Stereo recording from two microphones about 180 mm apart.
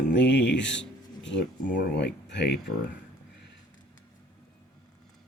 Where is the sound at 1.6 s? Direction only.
50° left (ahead or behind).